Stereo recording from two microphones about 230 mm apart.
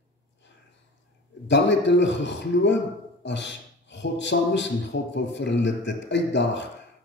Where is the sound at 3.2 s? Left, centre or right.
Left.